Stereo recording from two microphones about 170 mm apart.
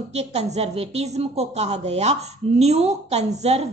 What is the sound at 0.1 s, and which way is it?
Speech, 40° right (ahead or behind).